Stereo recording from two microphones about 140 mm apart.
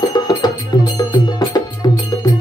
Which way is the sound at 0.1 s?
30° left (ahead or behind).